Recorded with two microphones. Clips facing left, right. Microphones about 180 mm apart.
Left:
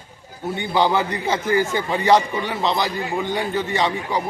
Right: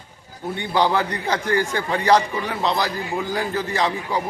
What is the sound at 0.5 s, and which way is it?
A man's voice, centre (ahead or behind).